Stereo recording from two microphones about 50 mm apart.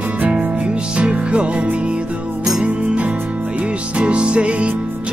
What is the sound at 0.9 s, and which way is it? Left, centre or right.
Music, right.